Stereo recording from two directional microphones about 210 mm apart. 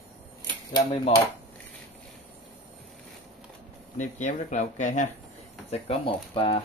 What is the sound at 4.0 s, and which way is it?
Speech, 35° left (ahead or behind).